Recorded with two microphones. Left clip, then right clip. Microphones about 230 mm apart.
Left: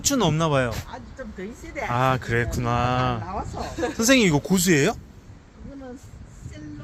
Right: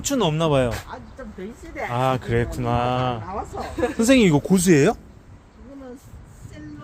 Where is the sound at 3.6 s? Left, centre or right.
Right.